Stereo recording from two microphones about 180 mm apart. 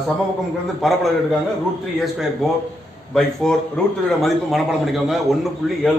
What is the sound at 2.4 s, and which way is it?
A man's voice, centre (ahead or behind).